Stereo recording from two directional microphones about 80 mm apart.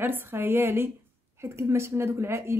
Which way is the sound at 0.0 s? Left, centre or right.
Right.